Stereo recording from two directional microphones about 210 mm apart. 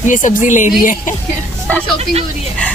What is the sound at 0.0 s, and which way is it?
Speech, 35° left (ahead or behind).